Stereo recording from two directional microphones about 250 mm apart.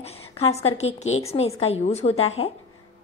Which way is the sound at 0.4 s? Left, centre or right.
Left.